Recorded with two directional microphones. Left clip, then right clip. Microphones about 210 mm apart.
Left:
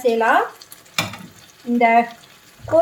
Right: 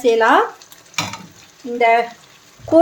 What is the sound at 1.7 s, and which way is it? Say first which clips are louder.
Speech: right 1 dB; 50° right (ahead or behind).